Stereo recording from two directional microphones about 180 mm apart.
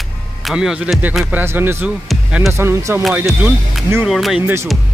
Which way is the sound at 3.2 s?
Centre (ahead or behind).